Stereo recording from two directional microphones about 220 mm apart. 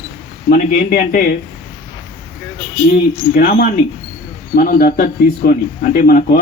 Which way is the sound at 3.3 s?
40° left (ahead or behind).